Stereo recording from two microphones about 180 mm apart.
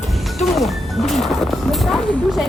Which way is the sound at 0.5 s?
Centre (ahead or behind).